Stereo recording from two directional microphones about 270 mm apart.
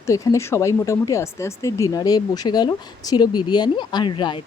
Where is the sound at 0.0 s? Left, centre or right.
Centre.